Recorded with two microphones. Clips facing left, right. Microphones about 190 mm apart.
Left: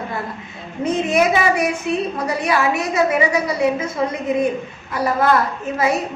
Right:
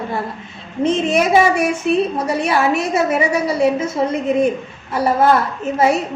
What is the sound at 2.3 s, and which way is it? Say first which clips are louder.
A woman's voice: right 2 dB; 25° right (ahead or behind).